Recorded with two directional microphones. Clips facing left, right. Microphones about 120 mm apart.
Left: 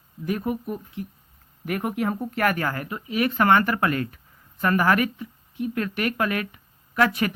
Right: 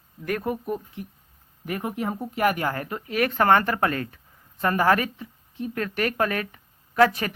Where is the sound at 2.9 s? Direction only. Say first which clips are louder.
Even; 45° right (ahead or behind).